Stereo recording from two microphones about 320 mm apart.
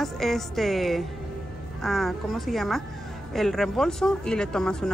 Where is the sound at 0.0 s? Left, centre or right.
Centre.